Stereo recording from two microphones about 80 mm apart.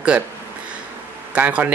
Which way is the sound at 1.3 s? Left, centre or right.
Centre.